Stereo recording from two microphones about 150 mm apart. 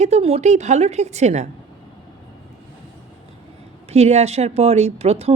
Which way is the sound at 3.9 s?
45° right (ahead or behind).